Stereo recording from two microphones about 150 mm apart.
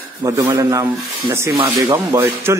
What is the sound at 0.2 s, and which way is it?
Speech, 20° right (ahead or behind).